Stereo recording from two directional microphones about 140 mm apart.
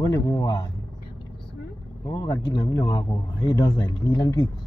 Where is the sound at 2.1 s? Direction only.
25° left (ahead or behind).